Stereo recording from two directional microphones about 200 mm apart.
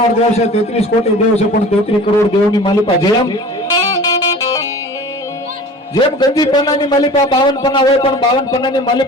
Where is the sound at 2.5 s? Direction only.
20° left (ahead or behind).